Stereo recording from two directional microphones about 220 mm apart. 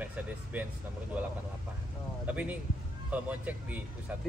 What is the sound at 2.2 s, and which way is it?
A man's voice, 5° right (ahead or behind).